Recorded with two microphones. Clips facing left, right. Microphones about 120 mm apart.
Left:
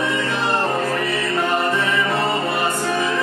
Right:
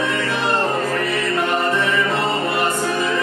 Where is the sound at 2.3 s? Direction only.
15° left (ahead or behind).